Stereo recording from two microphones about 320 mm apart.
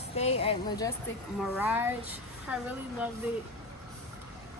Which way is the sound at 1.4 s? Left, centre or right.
Centre.